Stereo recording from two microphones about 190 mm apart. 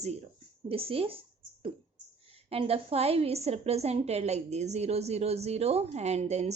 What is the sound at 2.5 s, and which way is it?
Speech, 30° right (ahead or behind).